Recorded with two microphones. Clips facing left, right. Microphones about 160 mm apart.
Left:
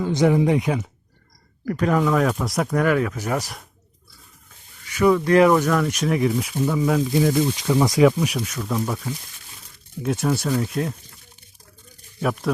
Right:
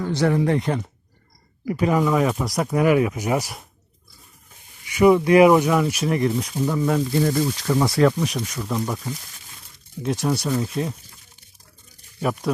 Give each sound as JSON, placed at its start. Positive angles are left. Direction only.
{"t": 0.0, "sound": "speech", "side_deg": 15}
{"t": 1.6, "sound": "speech", "side_deg": -5}
{"t": 4.9, "sound": "speech", "side_deg": -15}
{"t": 12.2, "sound": "speech", "side_deg": 0}